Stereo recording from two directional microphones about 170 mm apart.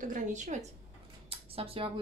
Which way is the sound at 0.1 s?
45° right (ahead or behind).